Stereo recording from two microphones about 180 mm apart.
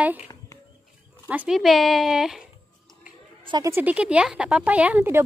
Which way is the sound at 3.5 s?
20° right (ahead or behind).